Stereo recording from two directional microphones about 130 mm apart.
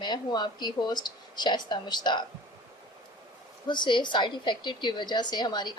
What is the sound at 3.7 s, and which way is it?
A woman's voice, 35° left (ahead or behind).